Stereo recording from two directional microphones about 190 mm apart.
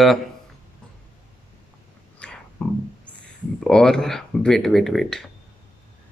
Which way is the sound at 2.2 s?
5° left (ahead or behind).